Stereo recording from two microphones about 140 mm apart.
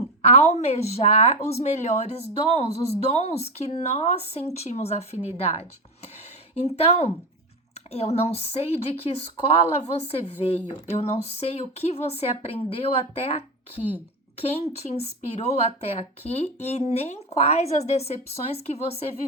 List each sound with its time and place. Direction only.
0.2 s a woman's voice: 50° left (ahead or behind)
6.7 s a woman's voice: 45° left (ahead or behind)